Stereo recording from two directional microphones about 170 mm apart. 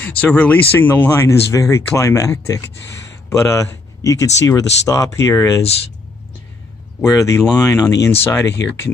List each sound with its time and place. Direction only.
0.0 s speech: 10° left (ahead or behind)
7.2 s speech: 15° left (ahead or behind)
8.5 s speech: 90° left